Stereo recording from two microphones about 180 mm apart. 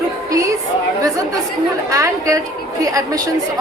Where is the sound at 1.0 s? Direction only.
20° right (ahead or behind).